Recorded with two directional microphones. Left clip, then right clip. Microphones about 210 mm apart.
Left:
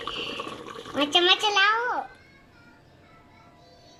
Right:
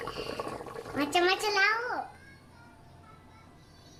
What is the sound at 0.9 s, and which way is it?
Speech, centre (ahead or behind).